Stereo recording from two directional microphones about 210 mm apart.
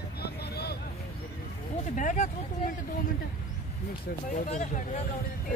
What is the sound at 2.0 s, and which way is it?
Vehicle, 40° left (ahead or behind).